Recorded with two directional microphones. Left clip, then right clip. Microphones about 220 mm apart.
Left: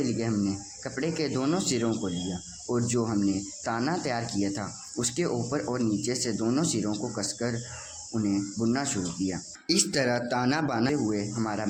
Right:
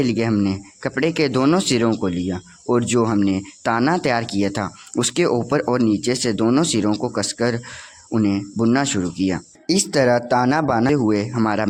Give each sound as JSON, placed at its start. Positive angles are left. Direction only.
{"t": 0.0, "sound": "speech", "side_deg": -40}
{"t": 10.9, "sound": "speech", "side_deg": -45}